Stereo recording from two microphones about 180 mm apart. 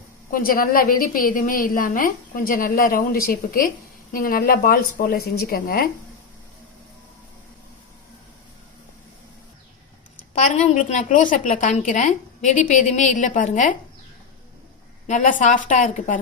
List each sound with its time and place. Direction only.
0.3 s a woman's voice: 50° left (ahead or behind)
10.2 s a woman's voice: 45° left (ahead or behind)
15.0 s a woman's voice: 45° left (ahead or behind)